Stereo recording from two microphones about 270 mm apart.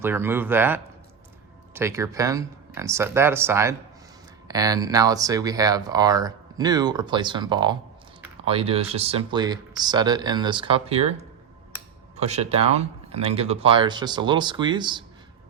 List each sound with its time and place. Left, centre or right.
0.0 s speech: centre